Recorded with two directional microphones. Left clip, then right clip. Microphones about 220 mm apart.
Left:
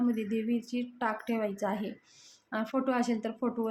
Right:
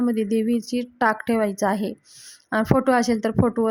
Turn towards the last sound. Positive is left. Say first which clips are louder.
# right 12 dB
turn(degrees=-40)  # may be behind; listen again after turning